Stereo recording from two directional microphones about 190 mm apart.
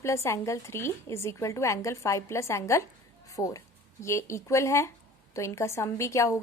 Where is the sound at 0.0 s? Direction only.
15° left (ahead or behind).